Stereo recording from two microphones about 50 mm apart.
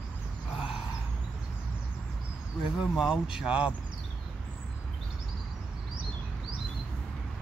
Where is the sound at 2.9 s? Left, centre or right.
Centre.